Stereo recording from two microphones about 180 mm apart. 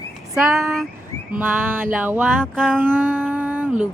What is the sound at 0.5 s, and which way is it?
Speech, centre (ahead or behind).